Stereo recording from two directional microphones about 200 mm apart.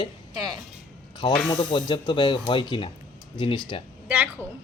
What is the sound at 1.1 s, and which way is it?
A man's voice, 20° left (ahead or behind).